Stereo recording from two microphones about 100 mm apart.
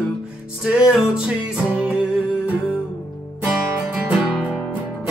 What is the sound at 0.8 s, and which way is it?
Music, 5° right (ahead or behind).